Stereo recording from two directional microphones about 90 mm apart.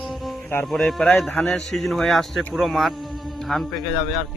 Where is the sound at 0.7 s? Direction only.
5° left (ahead or behind).